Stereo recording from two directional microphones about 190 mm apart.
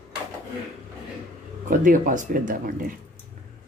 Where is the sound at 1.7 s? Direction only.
45° right (ahead or behind).